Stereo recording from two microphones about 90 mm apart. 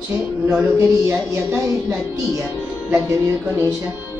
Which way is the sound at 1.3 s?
35° right (ahead or behind).